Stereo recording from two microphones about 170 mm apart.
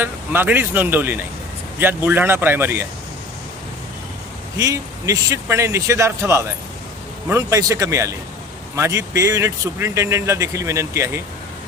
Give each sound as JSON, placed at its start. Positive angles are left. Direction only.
{"t": 0.0, "sound": "speech", "side_deg": -10}
{"t": 4.5, "sound": "speech", "side_deg": -20}